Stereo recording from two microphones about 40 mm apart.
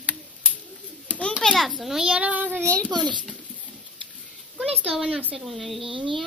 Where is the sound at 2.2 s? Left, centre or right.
Right.